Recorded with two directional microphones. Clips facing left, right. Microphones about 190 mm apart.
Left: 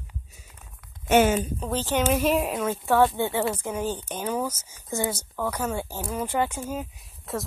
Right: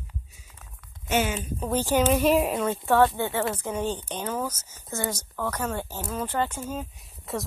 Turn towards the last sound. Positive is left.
turn(degrees=0)  # may be behind; listen again after turning